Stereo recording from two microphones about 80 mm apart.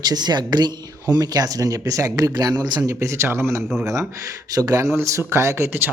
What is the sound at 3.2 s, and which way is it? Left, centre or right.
Speech, right.